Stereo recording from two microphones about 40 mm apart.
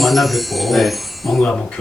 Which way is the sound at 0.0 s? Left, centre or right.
Centre.